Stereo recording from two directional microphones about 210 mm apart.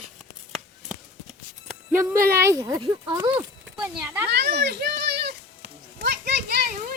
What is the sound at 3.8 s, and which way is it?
Speech, 10° right (ahead or behind).